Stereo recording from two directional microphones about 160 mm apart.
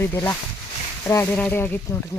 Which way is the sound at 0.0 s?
15° left (ahead or behind).